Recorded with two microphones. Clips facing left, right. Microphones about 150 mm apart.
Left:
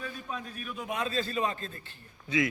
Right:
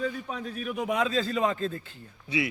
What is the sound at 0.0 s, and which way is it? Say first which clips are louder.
A man's voice: right 6 dB; 80° right.